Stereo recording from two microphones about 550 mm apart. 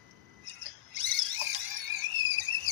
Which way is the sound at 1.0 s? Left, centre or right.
Right.